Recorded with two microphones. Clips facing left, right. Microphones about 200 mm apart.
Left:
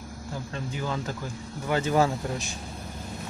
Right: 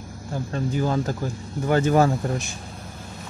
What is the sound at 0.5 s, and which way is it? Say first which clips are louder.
Speech: right 9 dB; 45° right (ahead or behind).